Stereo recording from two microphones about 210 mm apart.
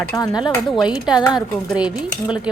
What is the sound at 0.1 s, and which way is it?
Speech, 20° left (ahead or behind).